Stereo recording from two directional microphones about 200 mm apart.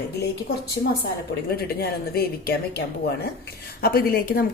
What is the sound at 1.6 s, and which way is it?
A woman's voice, 50° left (ahead or behind).